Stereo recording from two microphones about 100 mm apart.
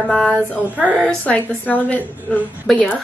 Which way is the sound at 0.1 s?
10° left (ahead or behind).